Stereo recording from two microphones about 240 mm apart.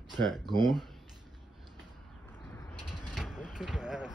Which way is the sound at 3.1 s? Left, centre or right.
Centre.